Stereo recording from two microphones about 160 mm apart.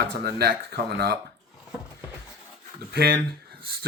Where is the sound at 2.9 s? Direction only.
75° right (ahead or behind).